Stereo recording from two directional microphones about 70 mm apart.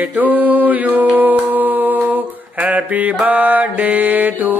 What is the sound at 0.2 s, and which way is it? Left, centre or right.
Mantra, right.